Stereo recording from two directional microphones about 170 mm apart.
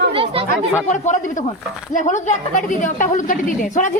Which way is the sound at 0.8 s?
45° left (ahead or behind).